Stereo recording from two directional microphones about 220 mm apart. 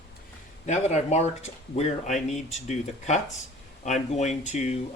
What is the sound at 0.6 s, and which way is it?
Speech, 30° left (ahead or behind).